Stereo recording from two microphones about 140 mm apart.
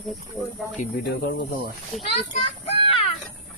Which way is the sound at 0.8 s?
90° left.